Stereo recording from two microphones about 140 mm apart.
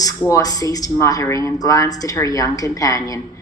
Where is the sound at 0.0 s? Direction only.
25° left (ahead or behind).